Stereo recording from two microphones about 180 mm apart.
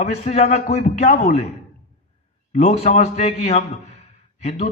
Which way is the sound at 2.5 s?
35° left (ahead or behind).